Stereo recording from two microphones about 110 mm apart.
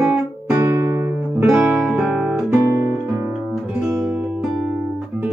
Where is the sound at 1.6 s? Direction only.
5° right (ahead or behind).